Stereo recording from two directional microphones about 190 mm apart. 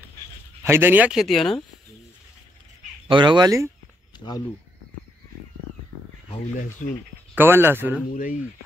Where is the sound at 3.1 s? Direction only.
25° right (ahead or behind).